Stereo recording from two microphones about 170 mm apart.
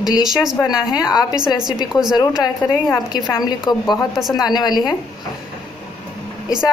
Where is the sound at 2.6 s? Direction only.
20° left (ahead or behind).